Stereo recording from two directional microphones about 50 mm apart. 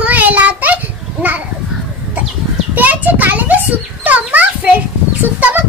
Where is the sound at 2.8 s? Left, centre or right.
Right.